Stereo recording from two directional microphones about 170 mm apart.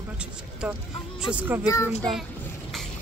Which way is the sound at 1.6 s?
20° left (ahead or behind).